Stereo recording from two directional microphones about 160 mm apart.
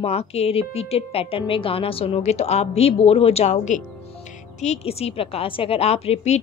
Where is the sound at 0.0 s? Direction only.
40° left (ahead or behind).